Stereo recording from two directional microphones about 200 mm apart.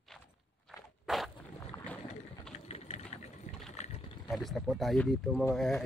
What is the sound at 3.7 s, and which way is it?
Boat, 35° left (ahead or behind).